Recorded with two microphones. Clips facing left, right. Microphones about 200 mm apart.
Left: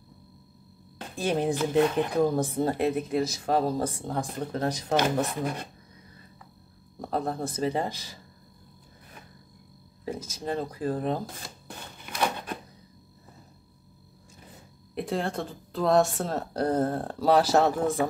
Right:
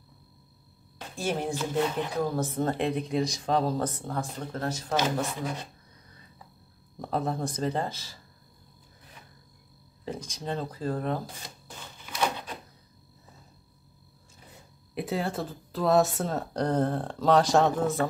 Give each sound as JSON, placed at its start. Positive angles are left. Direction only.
{"t": 1.1, "sound": "speech", "side_deg": 15}
{"t": 4.9, "sound": "speech", "side_deg": 60}
{"t": 7.0, "sound": "speech", "side_deg": 0}
{"t": 10.0, "sound": "speech", "side_deg": 10}
{"t": 11.6, "sound": "a sound", "side_deg": 55}
{"t": 15.0, "sound": "speech", "side_deg": -5}